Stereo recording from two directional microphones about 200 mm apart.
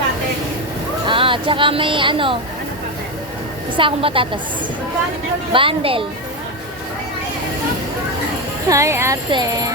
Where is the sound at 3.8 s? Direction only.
25° right (ahead or behind).